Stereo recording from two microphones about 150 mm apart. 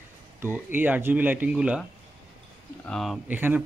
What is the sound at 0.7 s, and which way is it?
Speech, 10° right (ahead or behind).